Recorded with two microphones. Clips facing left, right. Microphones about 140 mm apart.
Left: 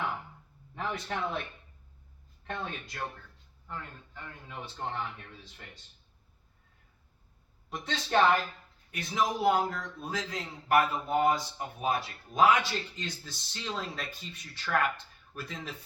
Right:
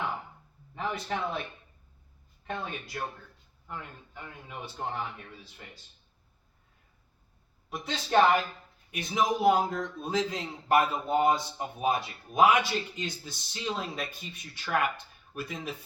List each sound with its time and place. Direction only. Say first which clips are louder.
0.8 s a man's voice: right 2 dB; 5° right (ahead or behind)
2.4 s a man's voice: right 1 dB; 5° right (ahead or behind)
7.7 s a man's voice: right 2 dB; 10° right (ahead or behind)